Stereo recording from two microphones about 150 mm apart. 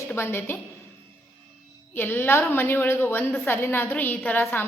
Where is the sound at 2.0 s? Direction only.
15° left (ahead or behind).